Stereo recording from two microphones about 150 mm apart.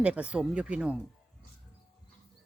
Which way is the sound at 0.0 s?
10° right (ahead or behind).